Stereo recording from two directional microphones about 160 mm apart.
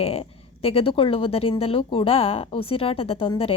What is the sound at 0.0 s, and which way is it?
Speech, 35° left (ahead or behind).